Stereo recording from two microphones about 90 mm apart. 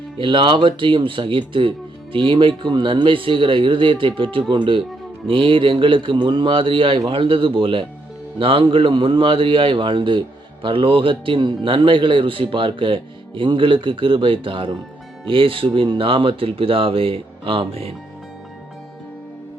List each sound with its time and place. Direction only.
0.2 s a man's voice: 65° right (ahead or behind); by 17.9 s 90° right